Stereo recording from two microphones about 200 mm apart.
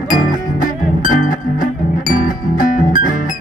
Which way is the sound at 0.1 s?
40° left (ahead or behind).